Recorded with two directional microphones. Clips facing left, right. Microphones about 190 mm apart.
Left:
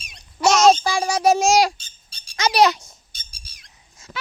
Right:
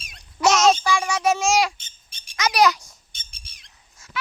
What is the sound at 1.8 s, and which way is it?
Squawk, 20° right (ahead or behind).